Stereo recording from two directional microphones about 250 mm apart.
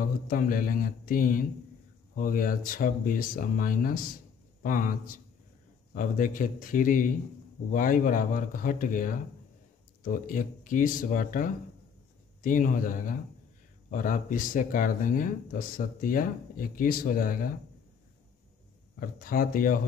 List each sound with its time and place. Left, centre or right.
0.0 s speech: left
18.9 s speech: left